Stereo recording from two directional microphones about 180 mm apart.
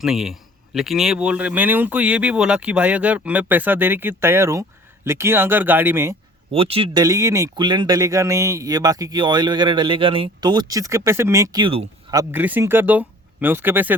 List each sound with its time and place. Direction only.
0.0 s speech: centre (ahead or behind)
6.5 s speech: 30° right (ahead or behind)
12.1 s speech: 10° right (ahead or behind)